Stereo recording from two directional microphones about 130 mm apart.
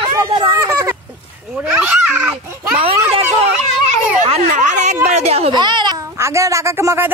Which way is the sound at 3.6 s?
60° right (ahead or behind).